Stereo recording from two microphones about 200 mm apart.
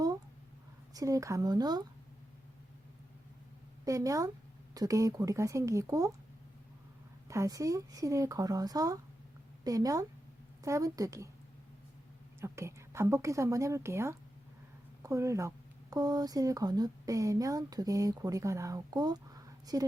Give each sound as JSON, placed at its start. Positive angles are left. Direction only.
{"t": 0.9, "sound": "a woman's voice", "side_deg": -15}
{"t": 3.8, "sound": "a woman's voice", "side_deg": -15}
{"t": 7.3, "sound": "a woman's voice", "side_deg": -15}
{"t": 12.4, "sound": "a woman's voice", "side_deg": -15}